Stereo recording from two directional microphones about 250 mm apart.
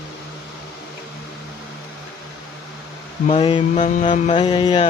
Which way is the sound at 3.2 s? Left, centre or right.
Left.